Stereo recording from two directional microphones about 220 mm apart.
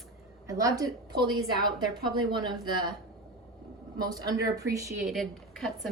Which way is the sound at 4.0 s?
15° right (ahead or behind).